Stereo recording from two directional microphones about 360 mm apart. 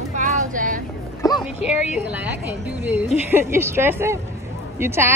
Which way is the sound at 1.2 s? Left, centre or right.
Centre.